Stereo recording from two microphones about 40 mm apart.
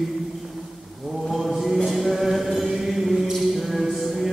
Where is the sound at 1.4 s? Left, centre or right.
Centre.